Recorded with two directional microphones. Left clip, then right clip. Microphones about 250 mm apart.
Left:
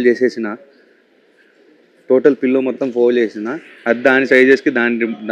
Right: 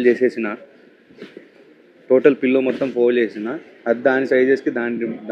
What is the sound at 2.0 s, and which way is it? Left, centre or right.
Speech, centre.